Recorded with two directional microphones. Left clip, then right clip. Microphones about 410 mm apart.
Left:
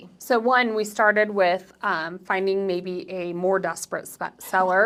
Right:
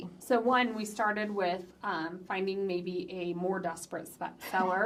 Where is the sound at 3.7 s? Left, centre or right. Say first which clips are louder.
Left 9 dB; left.